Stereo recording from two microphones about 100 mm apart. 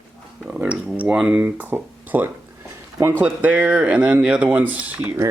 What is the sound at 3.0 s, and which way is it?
Speech, 20° right (ahead or behind).